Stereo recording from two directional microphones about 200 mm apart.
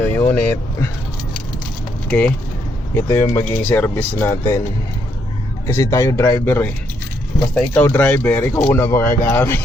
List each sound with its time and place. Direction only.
0.2 s speech: 10° left (ahead or behind)
2.0 s speech: 5° left (ahead or behind)
5.6 s speech: 15° left (ahead or behind)